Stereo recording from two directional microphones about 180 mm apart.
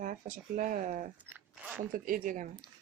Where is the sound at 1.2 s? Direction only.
10° right (ahead or behind).